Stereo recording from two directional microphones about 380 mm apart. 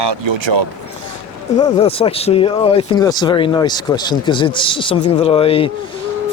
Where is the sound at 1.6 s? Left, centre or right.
Centre.